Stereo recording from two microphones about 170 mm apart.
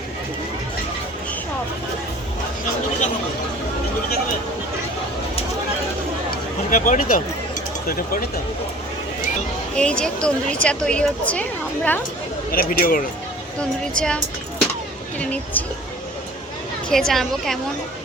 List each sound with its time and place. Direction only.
6.7 s speech: 50° left (ahead or behind)
9.7 s a woman's voice: 5° left (ahead or behind)
12.5 s speech: 55° left (ahead or behind)
13.6 s a woman's voice: 5° left (ahead or behind)
15.2 s speech: 5° left (ahead or behind)
16.9 s a woman's voice: centre (ahead or behind)